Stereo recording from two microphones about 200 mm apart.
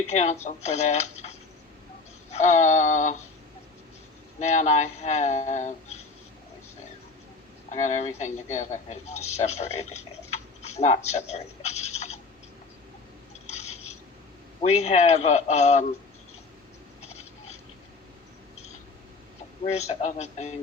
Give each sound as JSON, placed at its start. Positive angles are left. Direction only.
{"t": 0.1, "sound": "speech", "side_deg": 35}
{"t": 4.4, "sound": "speech", "side_deg": 35}
{"t": 7.7, "sound": "a man's voice", "side_deg": 35}
{"t": 13.5, "sound": "a sound", "side_deg": 35}
{"t": 14.6, "sound": "speech", "side_deg": 30}
{"t": 17.0, "sound": "a sound", "side_deg": 35}
{"t": 19.6, "sound": "speech", "side_deg": 35}